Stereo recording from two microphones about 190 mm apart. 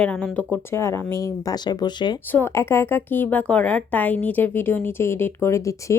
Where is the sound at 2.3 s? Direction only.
10° left (ahead or behind).